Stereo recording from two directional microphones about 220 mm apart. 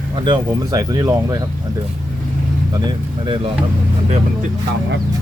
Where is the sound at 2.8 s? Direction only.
20° right (ahead or behind).